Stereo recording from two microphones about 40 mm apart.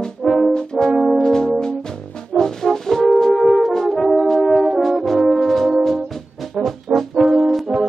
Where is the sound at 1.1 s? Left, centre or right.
Centre.